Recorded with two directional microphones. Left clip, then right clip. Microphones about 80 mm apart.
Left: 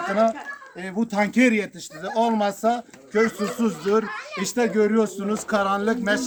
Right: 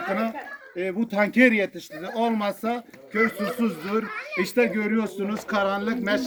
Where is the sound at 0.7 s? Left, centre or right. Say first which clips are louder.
Even; left.